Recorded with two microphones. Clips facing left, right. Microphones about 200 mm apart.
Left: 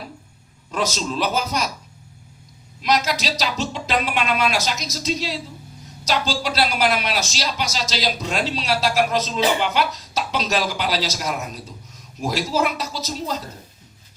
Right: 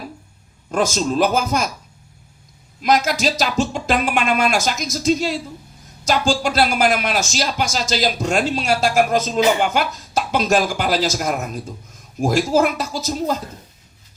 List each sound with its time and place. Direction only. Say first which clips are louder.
0.7 s speech: right 5 dB; 50° right (ahead or behind)
2.8 s speech: right 4 dB; 50° right (ahead or behind)